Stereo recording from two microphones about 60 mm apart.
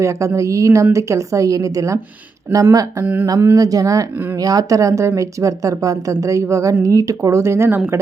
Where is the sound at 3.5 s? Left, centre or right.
Right.